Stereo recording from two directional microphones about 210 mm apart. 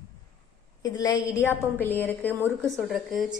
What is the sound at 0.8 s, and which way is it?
A woman's voice, 20° left (ahead or behind).